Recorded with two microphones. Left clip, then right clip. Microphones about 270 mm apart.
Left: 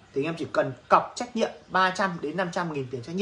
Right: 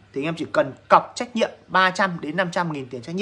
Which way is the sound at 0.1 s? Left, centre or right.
Centre.